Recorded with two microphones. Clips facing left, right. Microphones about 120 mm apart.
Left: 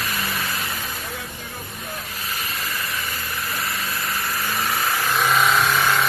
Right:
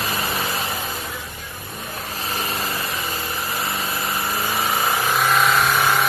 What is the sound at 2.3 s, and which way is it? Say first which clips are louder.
Engine: right 5 dB; 30° right (ahead or behind).